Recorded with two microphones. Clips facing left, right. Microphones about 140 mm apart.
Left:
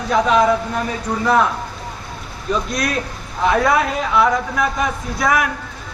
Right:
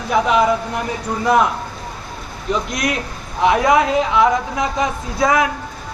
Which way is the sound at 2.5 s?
20° right (ahead or behind).